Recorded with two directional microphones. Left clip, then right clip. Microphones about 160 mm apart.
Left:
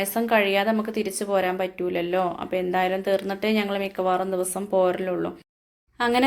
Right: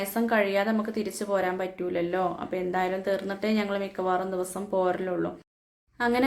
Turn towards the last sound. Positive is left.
turn(degrees=15)  # may be behind; listen again after turning